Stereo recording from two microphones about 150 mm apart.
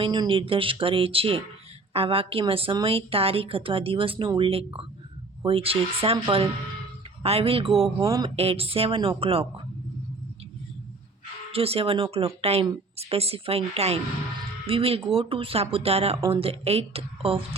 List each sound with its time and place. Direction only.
0.0 s a woman's voice: 35° right (ahead or behind)
7.9 s a sound: 20° right (ahead or behind)
8.4 s a woman's voice: 40° right (ahead or behind)
11.5 s a woman's voice: 40° right (ahead or behind)